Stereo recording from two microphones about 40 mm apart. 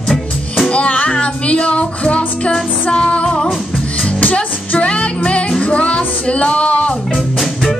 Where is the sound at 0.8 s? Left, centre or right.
Left.